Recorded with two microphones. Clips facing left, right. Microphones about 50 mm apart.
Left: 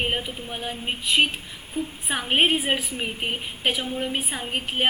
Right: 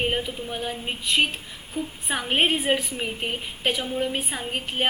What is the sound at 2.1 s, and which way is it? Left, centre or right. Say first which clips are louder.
A woman's voice: left 1 dB; centre.